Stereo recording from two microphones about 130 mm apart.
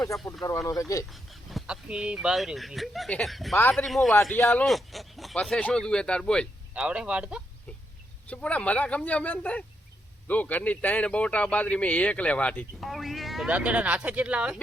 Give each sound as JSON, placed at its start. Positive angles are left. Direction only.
{"t": 0.1, "sound": "speech", "side_deg": 0}
{"t": 0.7, "sound": "speech", "side_deg": 25}
{"t": 1.1, "sound": "speech", "side_deg": 0}
{"t": 3.6, "sound": "a man's voice", "side_deg": 15}
{"t": 3.8, "sound": "speech", "side_deg": 0}
{"t": 4.4, "sound": "speech", "side_deg": 20}
{"t": 4.6, "sound": "a man's voice", "side_deg": 0}
{"t": 6.7, "sound": "speech", "side_deg": -10}
{"t": 8.3, "sound": "a man's voice", "side_deg": 10}
{"t": 12.8, "sound": "speech", "side_deg": 0}